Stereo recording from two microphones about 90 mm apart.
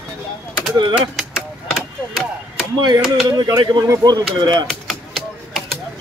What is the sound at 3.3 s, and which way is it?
Speech, 45° right (ahead or behind).